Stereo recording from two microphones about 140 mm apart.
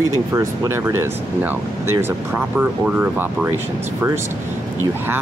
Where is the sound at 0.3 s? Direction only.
20° right (ahead or behind).